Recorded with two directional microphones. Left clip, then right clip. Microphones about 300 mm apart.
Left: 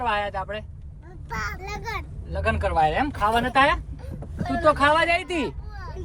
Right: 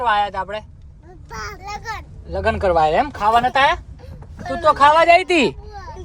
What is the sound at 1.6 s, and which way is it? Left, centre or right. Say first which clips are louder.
Speech: right 3 dB; centre.